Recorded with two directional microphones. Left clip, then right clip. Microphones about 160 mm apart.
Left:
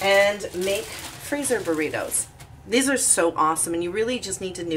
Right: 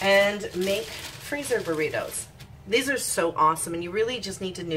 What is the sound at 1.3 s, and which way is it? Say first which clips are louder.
A woman's voice: left 3 dB; 25° left (ahead or behind).